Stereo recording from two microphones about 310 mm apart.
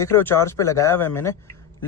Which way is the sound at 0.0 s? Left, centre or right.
Centre.